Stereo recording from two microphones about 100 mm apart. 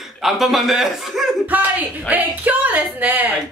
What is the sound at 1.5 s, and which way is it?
Speech, 15° right (ahead or behind).